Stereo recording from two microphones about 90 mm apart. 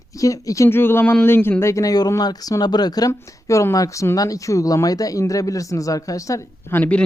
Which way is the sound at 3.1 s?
35° left (ahead or behind).